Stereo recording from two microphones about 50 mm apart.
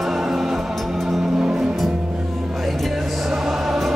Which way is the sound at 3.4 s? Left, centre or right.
Centre.